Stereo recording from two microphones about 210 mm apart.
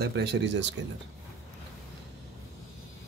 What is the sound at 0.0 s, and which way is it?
Speech, 50° right (ahead or behind).